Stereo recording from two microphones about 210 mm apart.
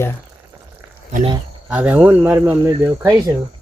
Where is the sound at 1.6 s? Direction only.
5° right (ahead or behind).